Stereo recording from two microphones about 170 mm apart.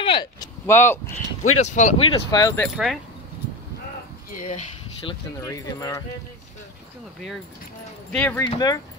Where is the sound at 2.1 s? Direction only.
25° left (ahead or behind).